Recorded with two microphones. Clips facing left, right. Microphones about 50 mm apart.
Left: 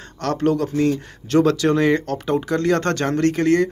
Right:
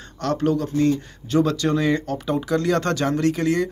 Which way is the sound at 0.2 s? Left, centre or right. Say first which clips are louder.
Left 2 dB; left.